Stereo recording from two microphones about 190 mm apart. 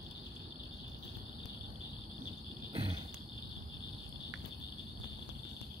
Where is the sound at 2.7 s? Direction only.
25° right (ahead or behind).